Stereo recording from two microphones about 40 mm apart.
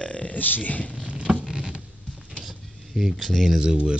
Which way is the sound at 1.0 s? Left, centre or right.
Right.